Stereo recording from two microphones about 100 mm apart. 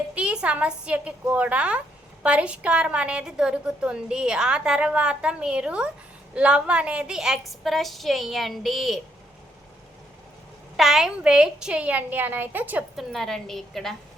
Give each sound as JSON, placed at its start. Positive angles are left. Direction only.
{"t": 0.1, "sound": "a woman's voice", "side_deg": -10}
{"t": 10.8, "sound": "a woman's voice", "side_deg": -5}
{"t": 13.1, "sound": "a woman's voice", "side_deg": 5}